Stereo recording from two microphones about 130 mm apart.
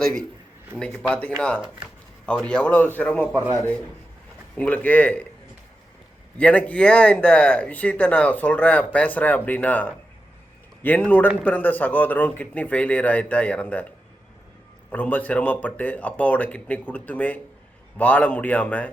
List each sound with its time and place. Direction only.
0.0 s a man's voice: 5° left (ahead or behind)
3.3 s speech: 25° right (ahead or behind)
4.5 s speech: 10° left (ahead or behind)
6.3 s speech: 10° left (ahead or behind)
14.8 s speech: 10° left (ahead or behind)